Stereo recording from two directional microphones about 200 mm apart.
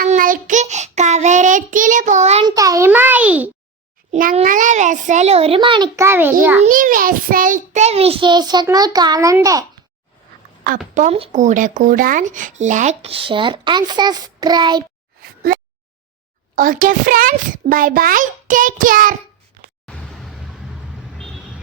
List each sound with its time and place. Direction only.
0.0 s child singing: 45° right (ahead or behind)
2.6 s music for children: 15° right (ahead or behind)
4.1 s speech: 40° right (ahead or behind); by 6.1 s 25° right (ahead or behind)
6.1 s a child's voice: 10° right (ahead or behind)
6.6 s a child's voice: 45° right (ahead or behind); by 9.6 s 15° right (ahead or behind)
10.9 s speech: 35° right (ahead or behind)
16.6 s a child's voice: 45° right (ahead or behind)
19.9 s a sound: centre (ahead or behind)